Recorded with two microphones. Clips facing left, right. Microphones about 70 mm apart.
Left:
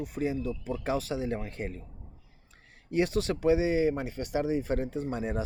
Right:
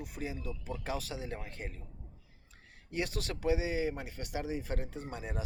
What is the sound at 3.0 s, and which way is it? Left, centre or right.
Speech, left.